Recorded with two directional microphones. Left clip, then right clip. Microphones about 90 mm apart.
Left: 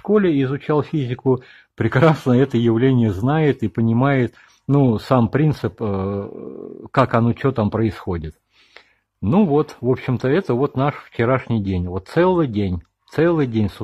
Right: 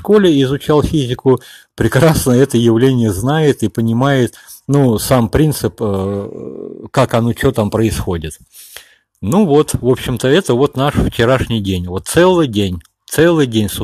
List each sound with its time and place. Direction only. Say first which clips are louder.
0.0 s speech: right 7 dB; 25° right (ahead or behind)
0.3 s speech: right 7 dB; 35° right (ahead or behind)
6.9 s speech: right 3 dB; 40° right (ahead or behind)
8.0 s speech: right 6 dB; 20° right (ahead or behind)
9.5 s speech: right 7 dB; 30° right (ahead or behind)